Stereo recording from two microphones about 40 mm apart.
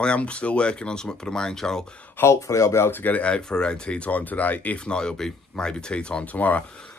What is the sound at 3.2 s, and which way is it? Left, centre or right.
Speech, left.